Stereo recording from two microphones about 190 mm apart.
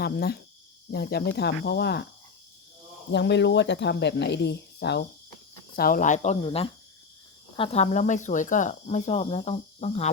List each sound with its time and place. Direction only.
0.0 s speech: 55° left (ahead or behind)
3.1 s speech: 65° left (ahead or behind)
5.7 s speech: 50° left (ahead or behind)